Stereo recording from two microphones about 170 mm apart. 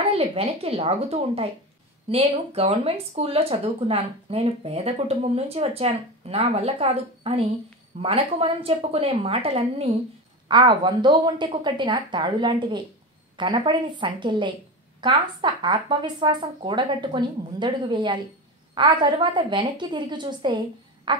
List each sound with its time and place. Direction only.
0.1 s speech: 35° right (ahead or behind)